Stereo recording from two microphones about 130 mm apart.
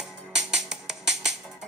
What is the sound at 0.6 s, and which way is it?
Music, 5° right (ahead or behind).